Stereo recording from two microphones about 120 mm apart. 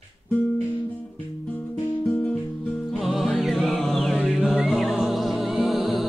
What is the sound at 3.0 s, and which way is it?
Music, centre (ahead or behind).